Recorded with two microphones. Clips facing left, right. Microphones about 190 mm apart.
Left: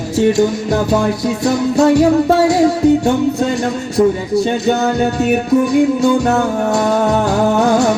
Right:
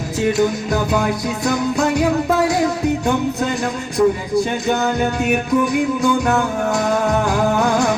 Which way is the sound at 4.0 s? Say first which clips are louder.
Left 3 dB; 30° left (ahead or behind).